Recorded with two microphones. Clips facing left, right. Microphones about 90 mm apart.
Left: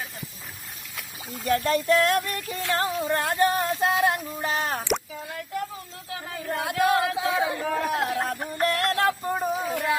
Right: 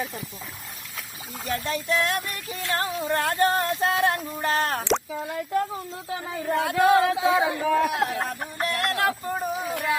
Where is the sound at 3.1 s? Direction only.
20° left (ahead or behind).